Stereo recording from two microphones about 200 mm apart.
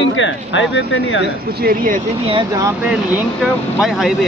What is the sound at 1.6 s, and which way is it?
Speech, 45° right (ahead or behind).